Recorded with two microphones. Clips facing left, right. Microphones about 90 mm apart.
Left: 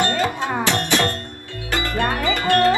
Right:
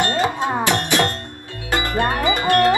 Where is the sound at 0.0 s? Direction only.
20° right (ahead or behind).